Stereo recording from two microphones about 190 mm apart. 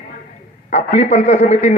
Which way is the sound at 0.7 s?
35° left (ahead or behind).